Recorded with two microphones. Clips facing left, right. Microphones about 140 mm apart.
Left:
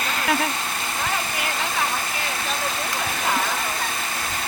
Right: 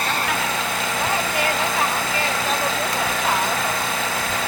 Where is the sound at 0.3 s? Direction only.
90° right.